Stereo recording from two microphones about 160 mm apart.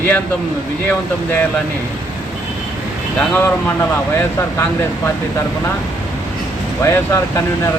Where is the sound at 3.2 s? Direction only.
15° left (ahead or behind).